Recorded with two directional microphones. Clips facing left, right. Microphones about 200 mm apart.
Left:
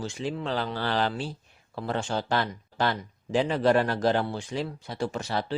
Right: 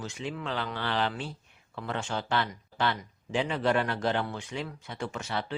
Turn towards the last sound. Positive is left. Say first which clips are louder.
# left 4 dB
turn(degrees=35)  # may be behind; listen again after turning